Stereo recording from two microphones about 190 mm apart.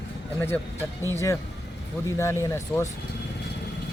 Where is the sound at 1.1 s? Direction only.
15° left (ahead or behind).